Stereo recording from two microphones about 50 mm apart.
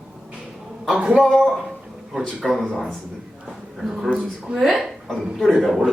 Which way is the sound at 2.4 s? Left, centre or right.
Centre.